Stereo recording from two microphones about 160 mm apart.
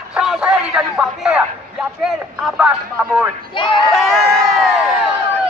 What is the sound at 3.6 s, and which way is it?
Crowd, 30° left (ahead or behind).